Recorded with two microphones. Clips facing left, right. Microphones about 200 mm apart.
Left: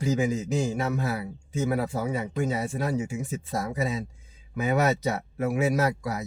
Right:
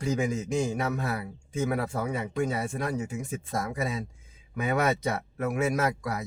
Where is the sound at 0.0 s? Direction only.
5° left (ahead or behind).